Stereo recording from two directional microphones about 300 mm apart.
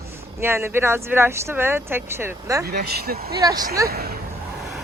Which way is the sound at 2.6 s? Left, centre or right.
Right.